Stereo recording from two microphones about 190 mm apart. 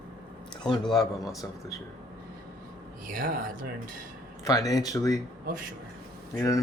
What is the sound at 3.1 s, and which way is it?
Speech, 45° right (ahead or behind).